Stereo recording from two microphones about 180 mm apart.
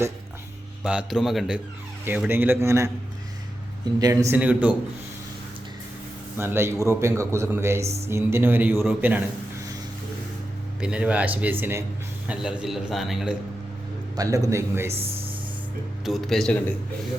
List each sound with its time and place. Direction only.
0.9 s a man's voice: 5° right (ahead or behind)
4.0 s a man's voice: 15° right (ahead or behind)
6.3 s a man's voice: 15° right (ahead or behind)
10.8 s a man's voice: 5° right (ahead or behind)
14.2 s a man's voice: 20° right (ahead or behind)
16.0 s a man's voice: centre (ahead or behind)